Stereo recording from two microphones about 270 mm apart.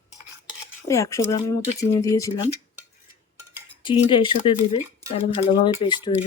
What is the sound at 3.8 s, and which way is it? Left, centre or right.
Speech, centre.